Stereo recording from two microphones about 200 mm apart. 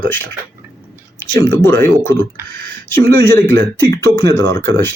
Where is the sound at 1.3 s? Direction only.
15° left (ahead or behind).